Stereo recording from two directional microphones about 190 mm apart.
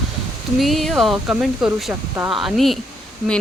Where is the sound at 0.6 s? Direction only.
Centre (ahead or behind).